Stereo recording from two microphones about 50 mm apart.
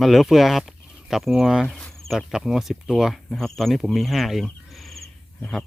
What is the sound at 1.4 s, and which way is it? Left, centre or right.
Speech, centre.